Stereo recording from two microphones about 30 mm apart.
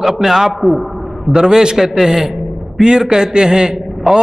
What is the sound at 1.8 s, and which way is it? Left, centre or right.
Speech, centre.